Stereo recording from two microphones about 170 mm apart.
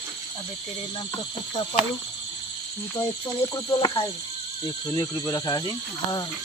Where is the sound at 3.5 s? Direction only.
20° left (ahead or behind).